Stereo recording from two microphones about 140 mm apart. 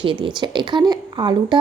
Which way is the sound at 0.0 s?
35° right (ahead or behind).